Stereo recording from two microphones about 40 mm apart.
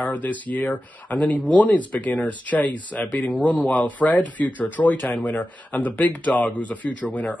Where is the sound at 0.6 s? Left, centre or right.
Left.